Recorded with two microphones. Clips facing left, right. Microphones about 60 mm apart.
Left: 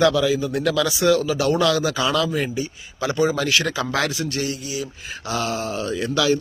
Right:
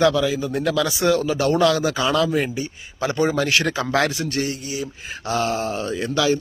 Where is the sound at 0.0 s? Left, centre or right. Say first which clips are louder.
Even; right.